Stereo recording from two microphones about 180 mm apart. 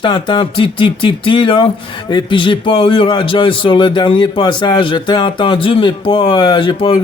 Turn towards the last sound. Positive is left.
turn(degrees=25)  # may be behind; listen again after turning